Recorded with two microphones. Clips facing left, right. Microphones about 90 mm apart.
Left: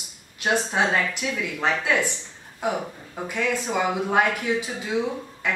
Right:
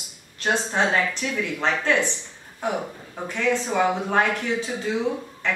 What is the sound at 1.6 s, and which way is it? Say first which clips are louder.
Speech: right 1 dB; 10° left (ahead or behind).